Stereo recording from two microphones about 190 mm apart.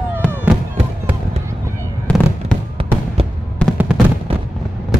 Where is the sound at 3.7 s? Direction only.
5° right (ahead or behind).